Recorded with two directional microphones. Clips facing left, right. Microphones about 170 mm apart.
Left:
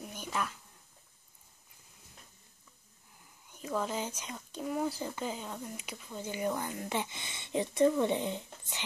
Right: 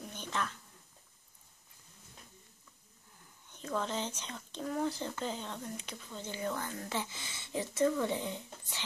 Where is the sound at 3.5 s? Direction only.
10° left (ahead or behind).